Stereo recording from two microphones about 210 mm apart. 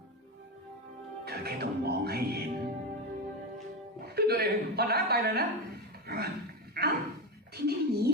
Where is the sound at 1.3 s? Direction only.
50° right (ahead or behind).